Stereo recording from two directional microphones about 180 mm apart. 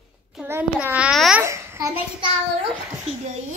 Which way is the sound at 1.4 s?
15° right (ahead or behind).